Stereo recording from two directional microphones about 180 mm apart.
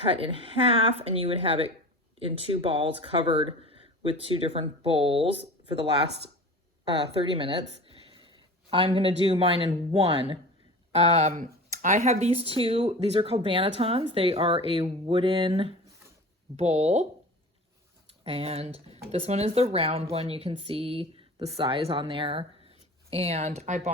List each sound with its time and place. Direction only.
0.0 s speech: 30° right (ahead or behind)
7.0 s speech: 30° right (ahead or behind)
7.9 s a sound: 30° right (ahead or behind)
8.7 s speech: 30° right (ahead or behind)
18.2 s speech: 35° right (ahead or behind)